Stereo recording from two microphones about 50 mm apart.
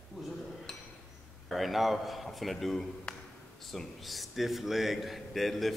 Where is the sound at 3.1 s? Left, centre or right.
Centre.